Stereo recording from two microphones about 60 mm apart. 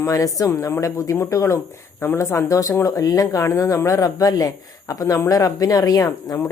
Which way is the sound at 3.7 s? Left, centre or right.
Left.